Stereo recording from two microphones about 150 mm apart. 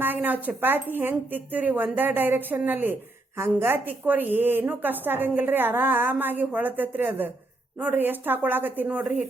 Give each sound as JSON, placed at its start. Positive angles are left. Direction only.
{"t": 0.0, "sound": "a woman's voice", "side_deg": -10}